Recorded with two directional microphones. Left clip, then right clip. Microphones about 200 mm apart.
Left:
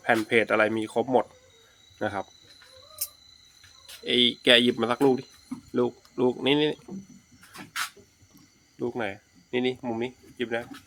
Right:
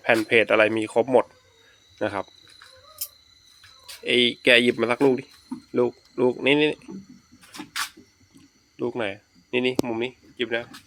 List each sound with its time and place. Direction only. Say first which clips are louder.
0.3 s speech: right 4 dB; 10° right (ahead or behind)
4.0 s speech: right 2 dB; 15° right (ahead or behind)
8.8 s speech: right 3 dB; 10° right (ahead or behind)